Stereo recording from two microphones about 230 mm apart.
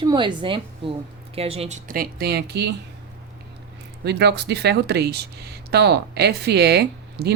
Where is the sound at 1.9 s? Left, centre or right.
Right.